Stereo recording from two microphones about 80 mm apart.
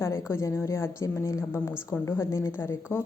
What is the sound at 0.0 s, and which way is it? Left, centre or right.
A woman's voice, left.